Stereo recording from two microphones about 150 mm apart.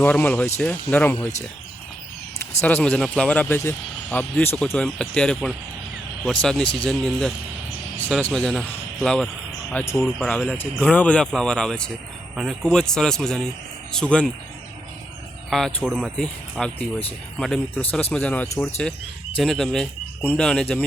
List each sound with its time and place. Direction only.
0.0 s speech: 10° left (ahead or behind)
2.6 s speech: 10° left (ahead or behind); by 10.2 s 5° right (ahead or behind)
10.2 s speech: 5° left (ahead or behind)
15.4 s speech: centre (ahead or behind)
18.4 s speech: 20° left (ahead or behind)
19.4 s speech: centre (ahead or behind)